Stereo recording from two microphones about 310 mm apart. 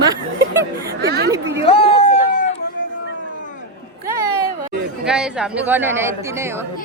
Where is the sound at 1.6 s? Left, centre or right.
Centre.